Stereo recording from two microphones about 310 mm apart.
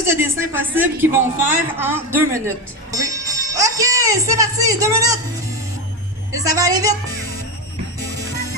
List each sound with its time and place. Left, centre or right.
0.1 s speech: centre
2.9 s music: centre
6.3 s speech: centre